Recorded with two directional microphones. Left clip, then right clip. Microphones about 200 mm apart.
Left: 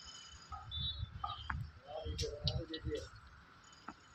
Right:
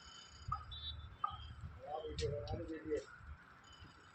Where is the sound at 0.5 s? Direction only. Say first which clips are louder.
Right 7 dB; 55° left (ahead or behind).